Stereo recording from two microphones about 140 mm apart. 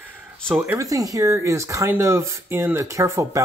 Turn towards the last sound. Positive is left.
turn(degrees=-20)  # may be behind; listen again after turning